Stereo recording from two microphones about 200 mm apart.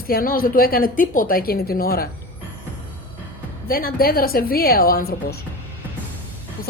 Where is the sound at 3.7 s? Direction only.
45° left (ahead or behind).